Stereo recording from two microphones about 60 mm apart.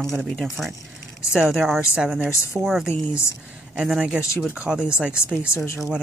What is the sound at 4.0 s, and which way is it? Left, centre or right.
A woman's voice, centre.